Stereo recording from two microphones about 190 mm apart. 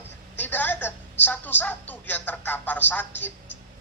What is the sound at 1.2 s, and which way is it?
A man's voice, 10° left (ahead or behind).